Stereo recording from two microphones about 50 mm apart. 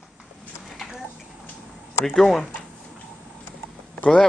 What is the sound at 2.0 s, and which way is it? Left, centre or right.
Speech, centre.